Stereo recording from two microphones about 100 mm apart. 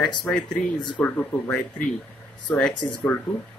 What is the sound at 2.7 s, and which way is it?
Speech, 50° left (ahead or behind).